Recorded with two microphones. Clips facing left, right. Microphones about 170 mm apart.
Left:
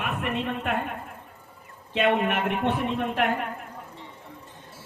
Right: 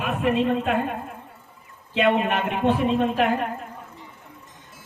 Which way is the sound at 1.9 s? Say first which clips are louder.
Right 2 dB; 75° right (ahead or behind).